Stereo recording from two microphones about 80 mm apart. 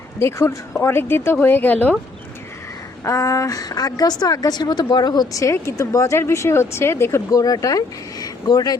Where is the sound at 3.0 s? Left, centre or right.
Left.